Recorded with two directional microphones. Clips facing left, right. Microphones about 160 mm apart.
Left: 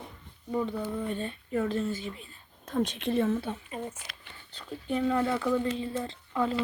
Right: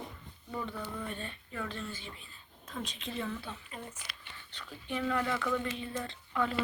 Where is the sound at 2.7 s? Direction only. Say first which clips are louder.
Left 12 dB; 50° left (ahead or behind).